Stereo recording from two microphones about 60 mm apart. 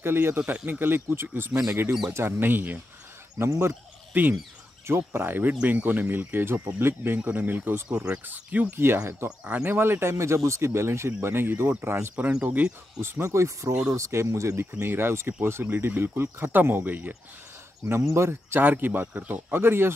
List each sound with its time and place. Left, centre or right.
0.0 s speech: right
3.3 s speech: right
4.1 s turkey: right
4.8 s speech: right
5.5 s speech: right
7.2 s speech: right
8.7 s speech: right
9.4 s speech: right
9.8 s speech: right
12.2 s speech: centre
13.0 s speech: right
18.1 s speech: right
18.6 s speech: right